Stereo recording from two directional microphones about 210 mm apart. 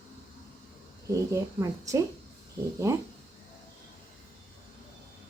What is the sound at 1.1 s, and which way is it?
Speech, 15° right (ahead or behind).